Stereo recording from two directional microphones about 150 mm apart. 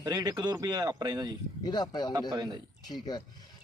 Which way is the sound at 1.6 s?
30° left (ahead or behind).